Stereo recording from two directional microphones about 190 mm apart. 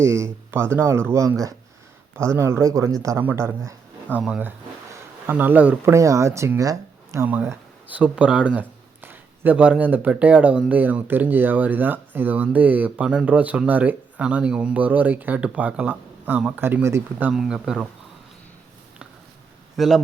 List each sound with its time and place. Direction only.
0.0 s speech: 15° right (ahead or behind)
19.7 s a man's voice: centre (ahead or behind)